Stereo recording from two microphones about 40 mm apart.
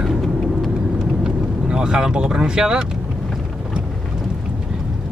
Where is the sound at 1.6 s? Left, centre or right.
Right.